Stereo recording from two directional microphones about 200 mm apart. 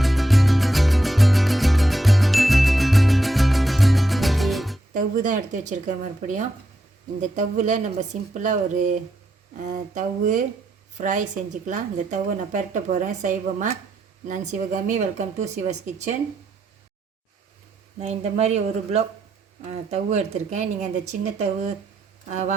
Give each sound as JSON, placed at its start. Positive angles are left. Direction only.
{"t": 0.0, "sound": "music", "side_deg": 0}
{"t": 4.9, "sound": "a woman's voice", "side_deg": -40}
{"t": 7.2, "sound": "a woman's voice", "side_deg": -40}
{"t": 18.0, "sound": "a woman's voice", "side_deg": -35}